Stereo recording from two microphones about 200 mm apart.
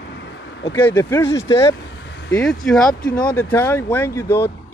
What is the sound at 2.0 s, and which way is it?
Vehicle, 60° left (ahead or behind).